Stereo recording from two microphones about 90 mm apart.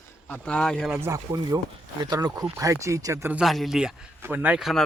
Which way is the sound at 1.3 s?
45° right (ahead or behind).